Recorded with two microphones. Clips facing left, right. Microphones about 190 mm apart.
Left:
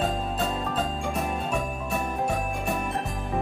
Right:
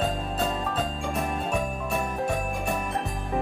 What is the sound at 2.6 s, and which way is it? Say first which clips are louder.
Jingle: even; centre (ahead or behind).